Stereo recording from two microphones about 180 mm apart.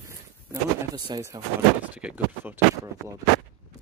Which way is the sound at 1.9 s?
10° right (ahead or behind).